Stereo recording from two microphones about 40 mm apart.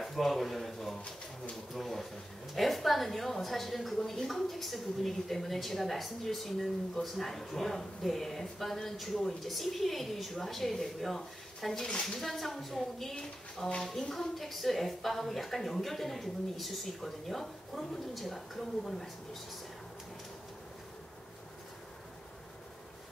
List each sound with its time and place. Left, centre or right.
0.0 s a sound: centre
1.7 s a woman's voice: centre
11.7 s speech: centre
12.2 s a woman's voice: centre